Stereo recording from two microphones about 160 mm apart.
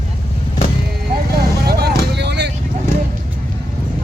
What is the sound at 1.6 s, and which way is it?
Music, 80° right.